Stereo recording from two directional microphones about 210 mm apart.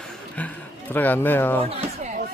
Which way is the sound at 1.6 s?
35° right (ahead or behind).